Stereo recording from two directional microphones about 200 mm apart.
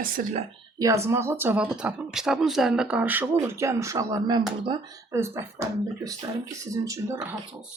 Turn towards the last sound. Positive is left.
turn(degrees=-15)  # may be behind; listen again after turning